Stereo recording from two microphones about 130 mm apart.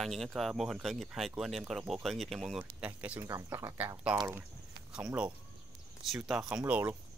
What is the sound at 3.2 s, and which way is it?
Speech, 25° right (ahead or behind).